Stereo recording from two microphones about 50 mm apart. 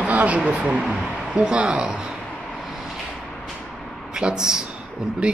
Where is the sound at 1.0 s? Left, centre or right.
Centre.